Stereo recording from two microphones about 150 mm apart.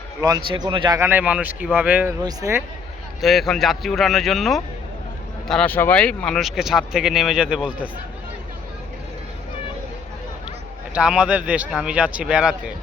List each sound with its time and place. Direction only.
0.2 s a man's voice: 30° right (ahead or behind)
0.9 s a man's voice: 15° right (ahead or behind)
3.2 s speech: centre (ahead or behind)
10.9 s speech: 5° right (ahead or behind)